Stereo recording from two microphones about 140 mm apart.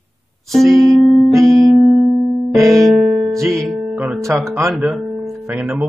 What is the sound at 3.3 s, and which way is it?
Music, 20° right (ahead or behind).